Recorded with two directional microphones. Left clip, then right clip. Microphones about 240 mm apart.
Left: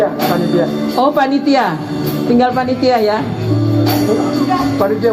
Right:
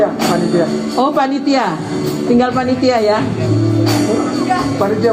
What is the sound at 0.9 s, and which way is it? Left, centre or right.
Speech, left.